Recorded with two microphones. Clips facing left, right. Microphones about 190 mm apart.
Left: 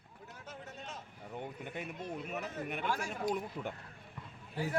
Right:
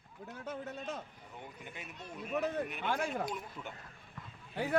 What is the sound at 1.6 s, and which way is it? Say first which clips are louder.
Speech: left 6 dB; 55° left (ahead or behind).